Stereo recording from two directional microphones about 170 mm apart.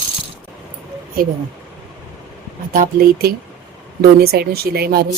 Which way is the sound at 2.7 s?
60° right (ahead or behind).